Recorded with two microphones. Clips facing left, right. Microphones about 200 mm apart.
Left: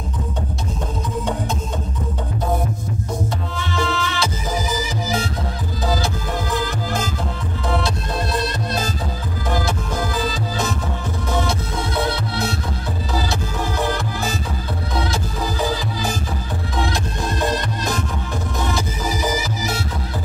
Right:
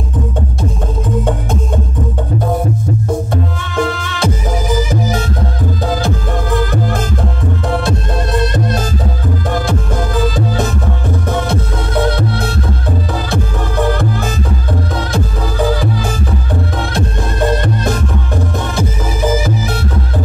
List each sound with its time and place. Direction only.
3.7 s music: 50° right (ahead or behind)
6.5 s music: 55° right (ahead or behind)
10.2 s music: 55° right (ahead or behind)
16.9 s music: 55° right (ahead or behind)
19.4 s music: 55° right (ahead or behind)